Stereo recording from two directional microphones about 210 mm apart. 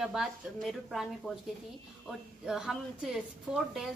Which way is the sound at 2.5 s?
Centre (ahead or behind).